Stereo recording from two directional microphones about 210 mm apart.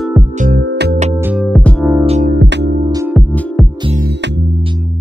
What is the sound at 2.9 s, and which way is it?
Music, 15° right (ahead or behind).